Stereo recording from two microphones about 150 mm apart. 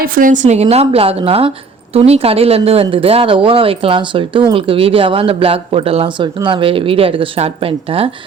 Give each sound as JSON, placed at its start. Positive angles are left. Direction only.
{"t": 0.0, "sound": "a woman's voice", "side_deg": -65}